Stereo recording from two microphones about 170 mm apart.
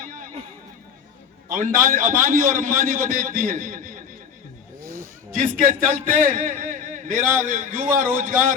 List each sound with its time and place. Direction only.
0.0 s a sound: 55° right (ahead or behind)
1.5 s a man's voice: 50° right (ahead or behind)
5.3 s a man's voice: 45° right (ahead or behind)